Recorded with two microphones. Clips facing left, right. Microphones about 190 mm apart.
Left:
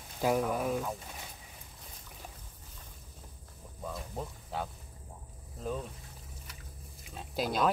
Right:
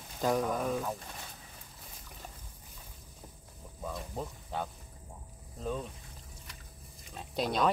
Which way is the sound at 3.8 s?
Centre (ahead or behind).